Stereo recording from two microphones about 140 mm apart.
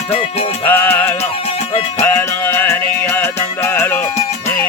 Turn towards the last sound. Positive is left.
turn(degrees=20)  # may be behind; listen again after turning